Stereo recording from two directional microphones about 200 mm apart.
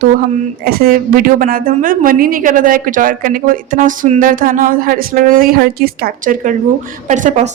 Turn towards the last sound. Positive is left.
turn(degrees=-35)  # may be behind; listen again after turning